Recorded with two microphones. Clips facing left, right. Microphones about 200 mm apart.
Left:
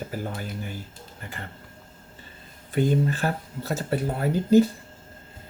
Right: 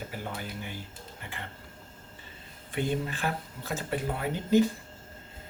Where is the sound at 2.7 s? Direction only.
40° left (ahead or behind).